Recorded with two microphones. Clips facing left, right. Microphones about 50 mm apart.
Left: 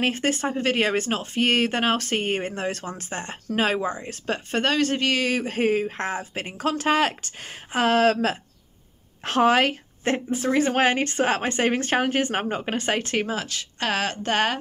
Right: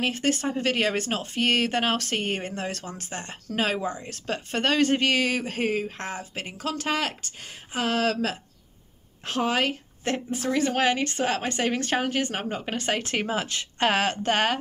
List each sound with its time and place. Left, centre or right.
0.1 s speech: centre
4.7 s speech: centre
5.7 s speech: left
6.6 s speech: left
9.2 s a woman's voice: left
10.1 s speech: left
10.8 s speech: left
13.0 s speech: centre
13.5 s speech: right
13.8 s a woman's voice: centre